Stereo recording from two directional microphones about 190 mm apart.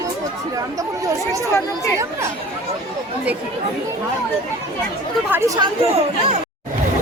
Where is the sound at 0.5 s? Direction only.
15° right (ahead or behind).